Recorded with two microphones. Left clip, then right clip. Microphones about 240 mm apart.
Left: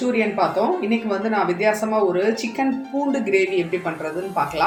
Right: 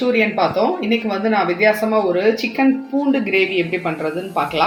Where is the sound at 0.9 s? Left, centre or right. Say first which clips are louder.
Right 4 dB; right.